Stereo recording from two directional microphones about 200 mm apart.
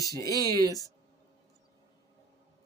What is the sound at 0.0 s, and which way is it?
Speech, 15° left (ahead or behind).